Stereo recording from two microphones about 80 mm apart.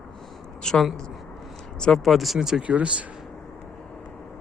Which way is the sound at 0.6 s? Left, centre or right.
Centre.